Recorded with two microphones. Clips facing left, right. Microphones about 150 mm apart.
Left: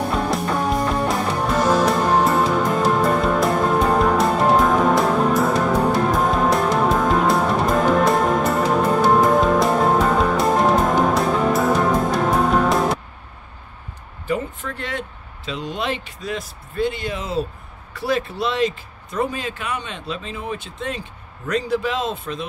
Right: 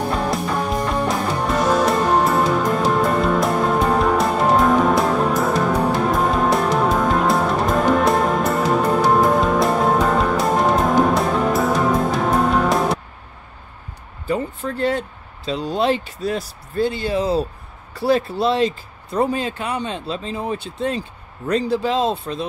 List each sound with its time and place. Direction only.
0.1 s music: centre (ahead or behind)
14.2 s speech: 35° right (ahead or behind)